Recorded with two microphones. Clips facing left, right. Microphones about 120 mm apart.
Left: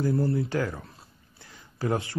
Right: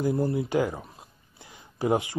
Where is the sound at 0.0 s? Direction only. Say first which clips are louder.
Even; 20° right (ahead or behind).